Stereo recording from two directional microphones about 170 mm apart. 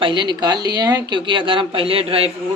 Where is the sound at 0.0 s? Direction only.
25° right (ahead or behind).